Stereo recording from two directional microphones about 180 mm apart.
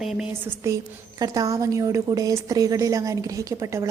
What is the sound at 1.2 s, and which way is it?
A woman's voice, 20° right (ahead or behind).